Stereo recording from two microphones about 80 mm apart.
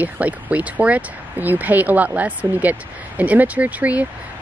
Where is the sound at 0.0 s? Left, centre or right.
Centre.